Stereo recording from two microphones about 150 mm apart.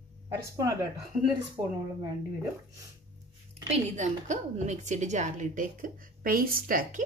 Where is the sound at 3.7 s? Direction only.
50° right (ahead or behind).